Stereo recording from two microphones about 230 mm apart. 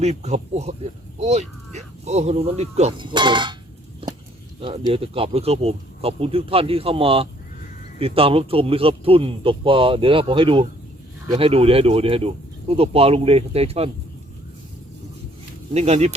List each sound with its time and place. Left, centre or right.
0.0 s speech: right
4.0 s a sound: right
4.6 s speech: right
15.7 s speech: right